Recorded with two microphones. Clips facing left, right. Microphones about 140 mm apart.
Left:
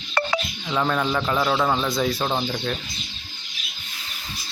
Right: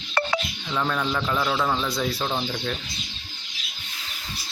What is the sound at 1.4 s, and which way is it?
A man's voice, 15° left (ahead or behind).